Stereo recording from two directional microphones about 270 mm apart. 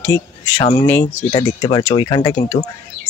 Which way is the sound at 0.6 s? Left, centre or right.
Centre.